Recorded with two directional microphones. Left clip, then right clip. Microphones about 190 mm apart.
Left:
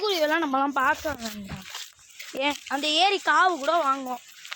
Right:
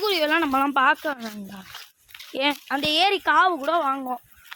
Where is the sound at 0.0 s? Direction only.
50° right (ahead or behind).